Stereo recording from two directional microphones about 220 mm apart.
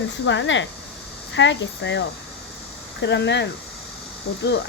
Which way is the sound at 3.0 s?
50° left (ahead or behind).